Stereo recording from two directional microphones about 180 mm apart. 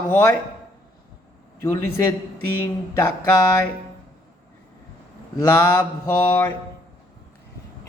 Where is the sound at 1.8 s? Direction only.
10° left (ahead or behind).